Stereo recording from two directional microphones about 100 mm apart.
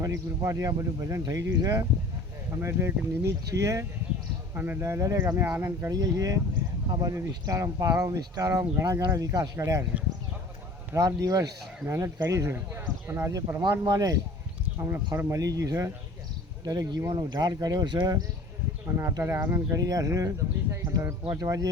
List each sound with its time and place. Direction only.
0.0 s speech: 35° right (ahead or behind)
2.6 s speech: 25° right (ahead or behind)
4.5 s speech: 20° right (ahead or behind)
5.9 s speech: 35° right (ahead or behind)
10.9 s speech: 35° right (ahead or behind)
13.6 s speech: 45° right (ahead or behind)
18.9 s speech: 30° right (ahead or behind)